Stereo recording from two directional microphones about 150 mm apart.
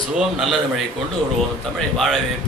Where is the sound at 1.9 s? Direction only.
Centre (ahead or behind).